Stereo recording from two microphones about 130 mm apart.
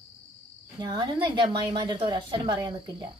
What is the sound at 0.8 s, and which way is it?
A woman's voice, 35° right (ahead or behind).